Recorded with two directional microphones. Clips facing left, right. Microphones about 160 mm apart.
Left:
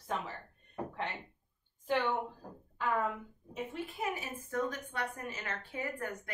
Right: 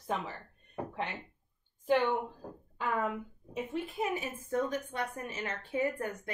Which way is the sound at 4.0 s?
25° right (ahead or behind).